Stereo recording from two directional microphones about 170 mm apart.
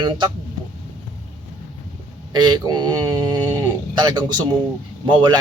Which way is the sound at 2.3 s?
25° right (ahead or behind).